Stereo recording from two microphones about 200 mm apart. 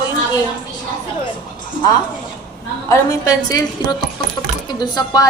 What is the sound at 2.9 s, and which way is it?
Speech, 15° left (ahead or behind).